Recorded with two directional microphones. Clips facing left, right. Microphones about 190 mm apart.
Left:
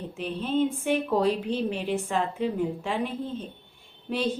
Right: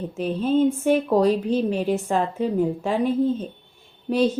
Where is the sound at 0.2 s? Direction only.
40° right (ahead or behind).